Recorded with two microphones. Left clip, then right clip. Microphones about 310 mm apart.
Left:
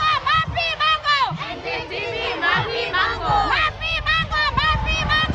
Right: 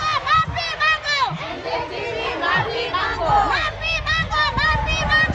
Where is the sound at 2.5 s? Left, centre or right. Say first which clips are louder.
Even; centre.